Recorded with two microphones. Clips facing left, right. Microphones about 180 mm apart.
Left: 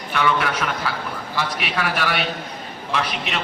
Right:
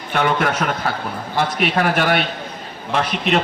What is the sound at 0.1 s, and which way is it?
A man's voice, 45° right (ahead or behind).